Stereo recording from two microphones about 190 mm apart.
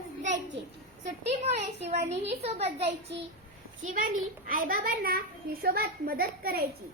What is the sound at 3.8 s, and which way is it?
A child's voice, 45° right (ahead or behind).